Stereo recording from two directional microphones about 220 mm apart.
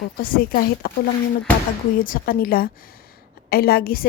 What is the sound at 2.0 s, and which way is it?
A woman's voice, 40° left (ahead or behind).